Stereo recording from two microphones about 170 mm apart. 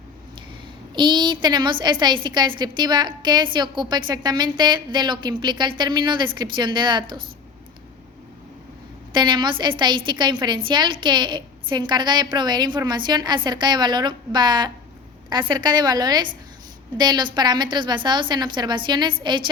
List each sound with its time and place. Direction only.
0.9 s a woman's voice: 25° right (ahead or behind)
9.1 s a woman's voice: 25° right (ahead or behind)